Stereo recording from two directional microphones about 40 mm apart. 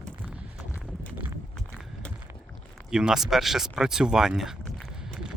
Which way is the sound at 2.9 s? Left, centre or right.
Centre.